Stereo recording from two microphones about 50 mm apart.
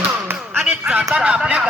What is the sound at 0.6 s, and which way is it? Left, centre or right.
Speech, right.